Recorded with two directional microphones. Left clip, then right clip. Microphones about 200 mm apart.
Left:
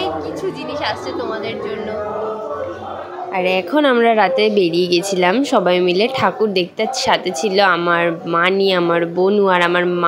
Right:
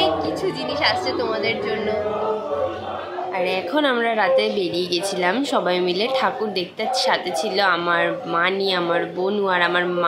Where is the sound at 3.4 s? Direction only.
30° left (ahead or behind).